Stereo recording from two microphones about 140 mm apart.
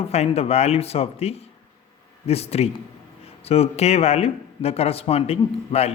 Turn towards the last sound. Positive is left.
turn(degrees=45)  # may be behind; listen again after turning